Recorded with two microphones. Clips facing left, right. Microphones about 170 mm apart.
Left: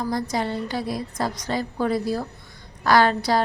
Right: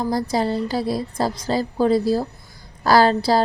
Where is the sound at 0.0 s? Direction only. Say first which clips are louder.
Right 4 dB; 30° right (ahead or behind).